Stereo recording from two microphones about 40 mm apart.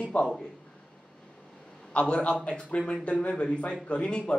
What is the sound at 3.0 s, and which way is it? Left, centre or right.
Speech, left.